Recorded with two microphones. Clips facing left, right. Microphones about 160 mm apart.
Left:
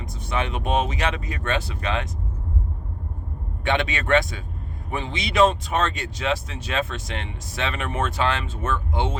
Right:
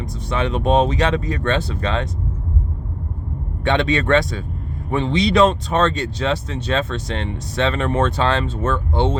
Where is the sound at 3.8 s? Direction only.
35° right (ahead or behind).